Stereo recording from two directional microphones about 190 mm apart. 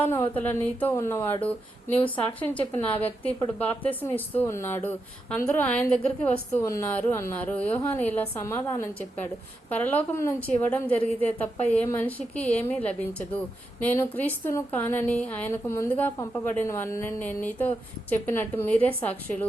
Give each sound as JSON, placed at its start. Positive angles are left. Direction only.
{"t": 0.0, "sound": "speech", "side_deg": 10}